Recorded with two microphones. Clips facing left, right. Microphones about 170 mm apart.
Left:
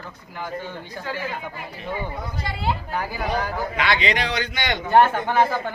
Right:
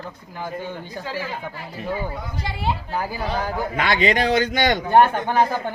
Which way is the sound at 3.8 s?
45° right (ahead or behind).